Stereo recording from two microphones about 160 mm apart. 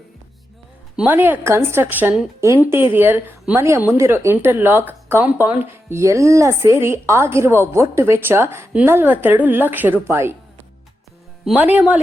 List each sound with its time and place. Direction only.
0.9 s a woman's voice: 10° right (ahead or behind)
11.4 s a woman's voice: 10° right (ahead or behind)